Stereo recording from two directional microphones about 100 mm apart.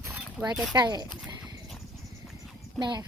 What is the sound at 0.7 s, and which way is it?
Speech, 45° right (ahead or behind).